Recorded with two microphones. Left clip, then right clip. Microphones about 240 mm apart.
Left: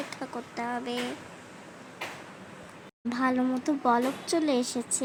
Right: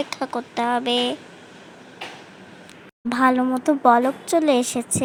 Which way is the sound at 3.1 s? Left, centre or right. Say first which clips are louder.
Right 9 dB; centre.